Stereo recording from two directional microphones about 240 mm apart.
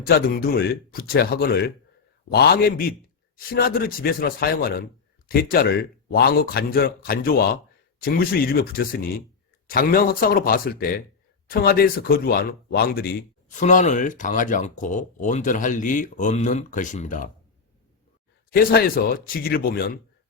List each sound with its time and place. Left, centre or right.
0.0 s speech: left
18.5 s speech: left